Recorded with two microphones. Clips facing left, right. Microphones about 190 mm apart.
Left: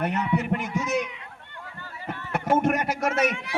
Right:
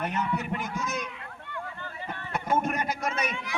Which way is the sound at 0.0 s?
65° left (ahead or behind).